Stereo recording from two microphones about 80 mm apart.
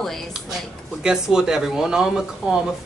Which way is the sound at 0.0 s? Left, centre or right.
Centre.